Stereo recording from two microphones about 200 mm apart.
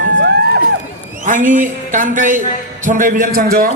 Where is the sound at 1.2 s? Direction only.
40° right (ahead or behind).